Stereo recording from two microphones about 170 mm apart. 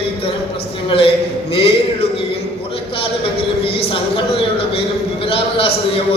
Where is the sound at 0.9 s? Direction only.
35° left (ahead or behind).